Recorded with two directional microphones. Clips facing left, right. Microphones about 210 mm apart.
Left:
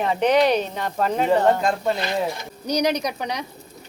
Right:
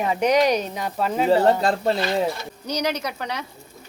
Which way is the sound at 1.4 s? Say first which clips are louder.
Right 1 dB; 35° right (ahead or behind).